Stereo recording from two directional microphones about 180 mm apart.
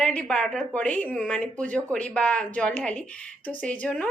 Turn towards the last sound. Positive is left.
turn(degrees=5)  # may be behind; listen again after turning